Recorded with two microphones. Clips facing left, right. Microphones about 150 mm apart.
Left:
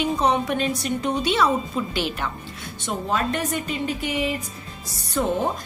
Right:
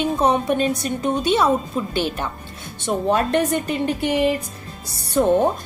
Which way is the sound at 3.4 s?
55° right (ahead or behind).